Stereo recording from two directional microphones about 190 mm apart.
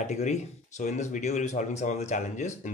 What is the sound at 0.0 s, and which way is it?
Speech, 35° left (ahead or behind).